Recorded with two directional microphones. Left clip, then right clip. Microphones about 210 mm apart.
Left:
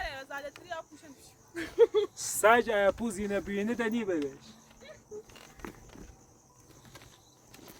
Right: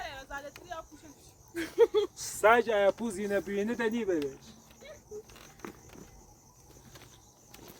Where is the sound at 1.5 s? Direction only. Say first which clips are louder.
Left 1 dB; 20° right (ahead or behind).